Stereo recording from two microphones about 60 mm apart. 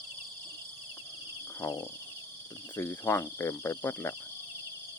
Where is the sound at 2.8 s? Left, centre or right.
Left.